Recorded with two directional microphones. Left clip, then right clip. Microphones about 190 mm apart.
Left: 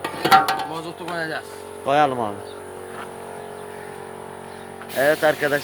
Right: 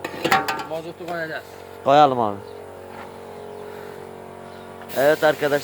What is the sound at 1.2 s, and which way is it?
Speech, 55° left (ahead or behind).